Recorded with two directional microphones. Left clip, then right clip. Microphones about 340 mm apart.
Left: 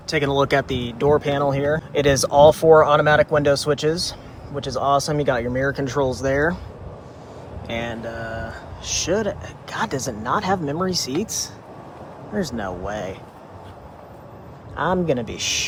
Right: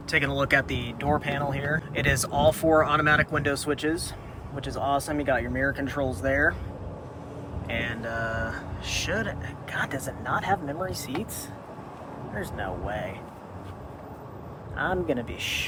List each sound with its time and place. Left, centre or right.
0.1 s speech: centre
7.8 s speech: centre
12.4 s speech: centre
14.8 s speech: centre